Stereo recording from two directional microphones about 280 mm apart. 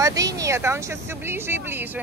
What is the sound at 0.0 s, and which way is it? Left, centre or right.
Speech, centre.